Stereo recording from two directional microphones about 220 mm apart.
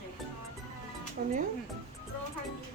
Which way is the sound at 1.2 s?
40° right (ahead or behind).